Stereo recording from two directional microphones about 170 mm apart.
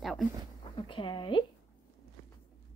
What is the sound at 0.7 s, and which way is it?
Speech, 30° left (ahead or behind).